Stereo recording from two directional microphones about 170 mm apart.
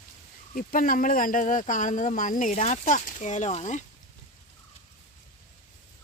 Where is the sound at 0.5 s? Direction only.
55° left (ahead or behind).